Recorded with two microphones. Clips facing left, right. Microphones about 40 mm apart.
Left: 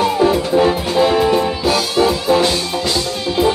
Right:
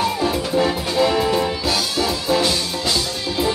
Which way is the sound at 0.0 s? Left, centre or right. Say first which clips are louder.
Left 6 dB; left.